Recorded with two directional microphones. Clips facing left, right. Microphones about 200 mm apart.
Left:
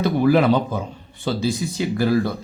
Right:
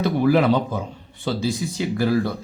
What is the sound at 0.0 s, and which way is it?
Speech, 45° left (ahead or behind).